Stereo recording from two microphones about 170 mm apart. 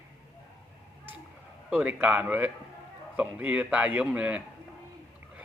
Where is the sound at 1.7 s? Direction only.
10° right (ahead or behind).